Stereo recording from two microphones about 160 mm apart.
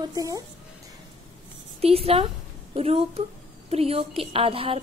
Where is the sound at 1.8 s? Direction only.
40° right (ahead or behind).